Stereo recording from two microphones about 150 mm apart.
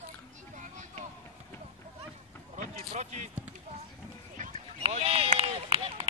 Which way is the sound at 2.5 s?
50° right (ahead or behind).